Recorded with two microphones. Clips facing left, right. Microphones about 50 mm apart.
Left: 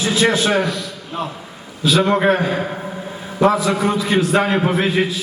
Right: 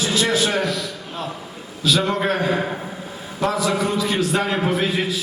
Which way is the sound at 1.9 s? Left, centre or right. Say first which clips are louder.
Left 5 dB; left.